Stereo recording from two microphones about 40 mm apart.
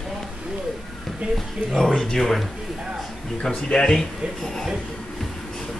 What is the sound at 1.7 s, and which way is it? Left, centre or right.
Speech, centre.